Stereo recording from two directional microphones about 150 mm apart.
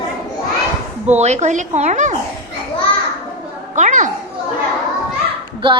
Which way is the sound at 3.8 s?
55° right (ahead or behind).